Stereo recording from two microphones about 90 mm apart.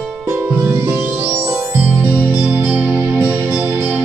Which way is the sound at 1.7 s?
20° right (ahead or behind).